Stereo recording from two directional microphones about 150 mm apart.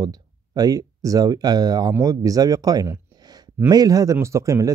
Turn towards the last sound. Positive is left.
turn(degrees=-20)  # may be behind; listen again after turning